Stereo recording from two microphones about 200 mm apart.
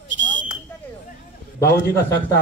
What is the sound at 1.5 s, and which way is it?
Speech, 15° left (ahead or behind).